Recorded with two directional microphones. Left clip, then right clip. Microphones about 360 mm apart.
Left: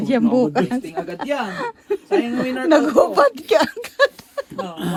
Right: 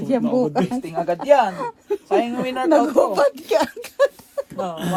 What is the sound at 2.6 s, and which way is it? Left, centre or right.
Speech, left.